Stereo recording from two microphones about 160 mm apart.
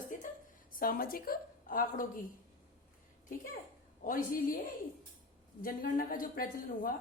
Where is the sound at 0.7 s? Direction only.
65° left (ahead or behind).